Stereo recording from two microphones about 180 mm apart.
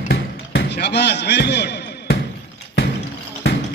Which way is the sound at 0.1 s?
70° left (ahead or behind).